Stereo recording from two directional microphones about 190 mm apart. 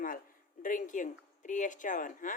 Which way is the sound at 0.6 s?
45° left (ahead or behind).